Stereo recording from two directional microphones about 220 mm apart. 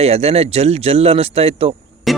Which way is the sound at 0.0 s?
30° right (ahead or behind).